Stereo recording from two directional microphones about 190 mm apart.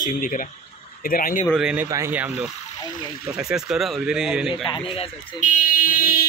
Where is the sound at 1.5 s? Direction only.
5° right (ahead or behind).